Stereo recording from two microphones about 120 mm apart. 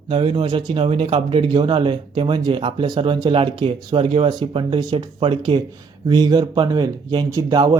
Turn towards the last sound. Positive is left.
turn(degrees=-30)  # may be behind; listen again after turning